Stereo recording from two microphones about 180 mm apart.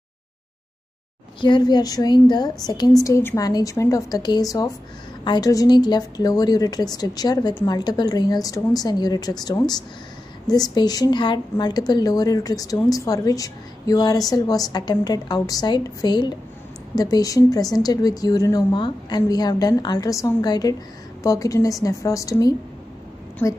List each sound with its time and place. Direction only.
1.4 s a woman's voice: 25° left (ahead or behind)